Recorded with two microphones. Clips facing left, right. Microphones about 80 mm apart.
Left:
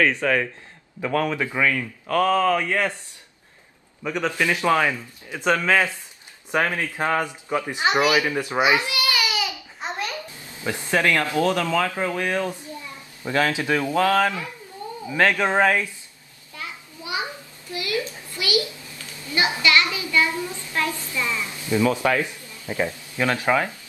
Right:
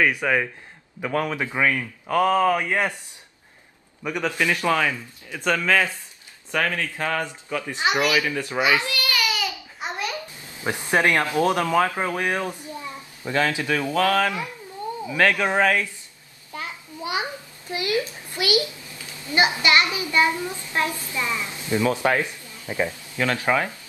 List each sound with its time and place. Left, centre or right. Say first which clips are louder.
0.0 s a man's voice: left 1 dB; centre
4.0 s a man's voice: left 1 dB; centre
4.3 s speech: left 1 dB; centre
9.8 s a sound: even; centre
10.6 s speech: right 1 dB; right
13.2 s speech: left 1 dB; centre
17.0 s a sound: right 2 dB; right
18.3 s a child's voice: right 2 dB; right
19.2 s child singing: right 3 dB; right
19.6 s speech: even; right
22.4 s a sound: left 1 dB; right
22.8 s speech: even; left